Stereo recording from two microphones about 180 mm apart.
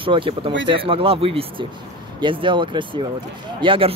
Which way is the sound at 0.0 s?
30° right (ahead or behind).